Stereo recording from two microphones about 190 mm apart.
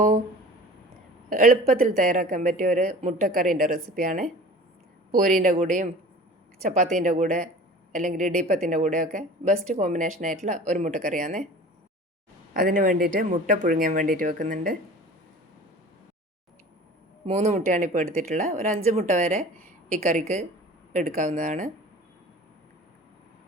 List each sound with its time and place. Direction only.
1.3 s speech: 45° right (ahead or behind)
5.3 s speech: 40° right (ahead or behind)
12.5 s speech: 45° right (ahead or behind)
17.2 s speech: 35° right (ahead or behind)